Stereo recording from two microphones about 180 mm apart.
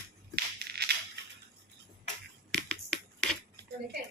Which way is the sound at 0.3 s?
65° right (ahead or behind).